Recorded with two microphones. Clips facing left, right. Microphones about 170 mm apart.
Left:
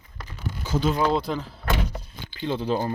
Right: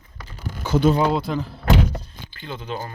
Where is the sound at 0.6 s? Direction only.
65° right (ahead or behind).